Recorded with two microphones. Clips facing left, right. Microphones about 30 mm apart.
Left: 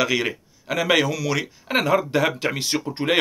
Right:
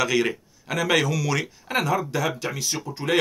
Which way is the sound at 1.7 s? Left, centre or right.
Left.